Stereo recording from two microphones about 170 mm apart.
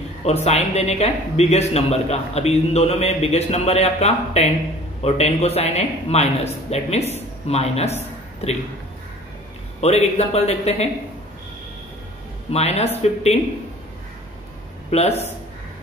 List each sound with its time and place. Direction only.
0.2 s a man's voice: 40° left (ahead or behind)
9.8 s a man's voice: 40° left (ahead or behind)
12.4 s a man's voice: 40° left (ahead or behind)
14.9 s a man's voice: 40° left (ahead or behind)